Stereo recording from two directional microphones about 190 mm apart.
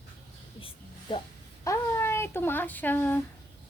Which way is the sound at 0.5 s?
30° left (ahead or behind).